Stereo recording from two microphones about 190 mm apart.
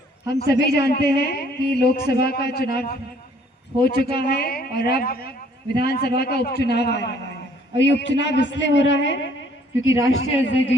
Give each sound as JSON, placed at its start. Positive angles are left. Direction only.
{"t": 0.3, "sound": "a man's voice", "side_deg": 60}